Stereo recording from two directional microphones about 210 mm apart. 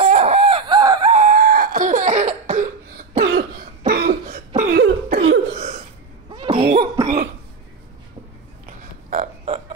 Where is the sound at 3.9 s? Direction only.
45° right (ahead or behind).